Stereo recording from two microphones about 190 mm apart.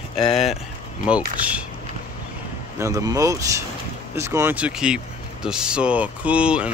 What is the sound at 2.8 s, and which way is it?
Speech, 15° right (ahead or behind).